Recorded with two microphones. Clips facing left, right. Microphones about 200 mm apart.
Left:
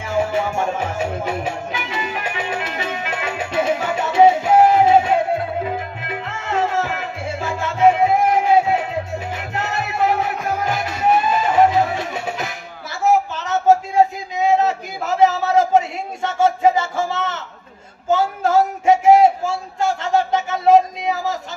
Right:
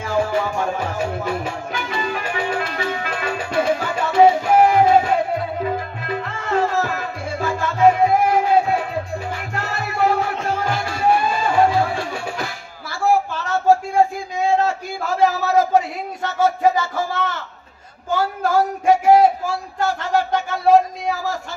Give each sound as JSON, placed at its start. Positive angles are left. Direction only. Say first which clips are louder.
{"t": 0.0, "sound": "music", "louder": "even", "side_deg": 25}
{"t": 6.4, "sound": "music", "louder": "right 1 dB", "side_deg": 25}
{"t": 9.4, "sound": "music", "louder": "left 2 dB", "side_deg": 20}
{"t": 10.3, "sound": "music", "louder": "even", "side_deg": -25}
{"t": 10.6, "sound": "music", "louder": "left 1 dB", "side_deg": 20}
{"t": 13.0, "sound": "a sound", "louder": "left 1 dB", "side_deg": 20}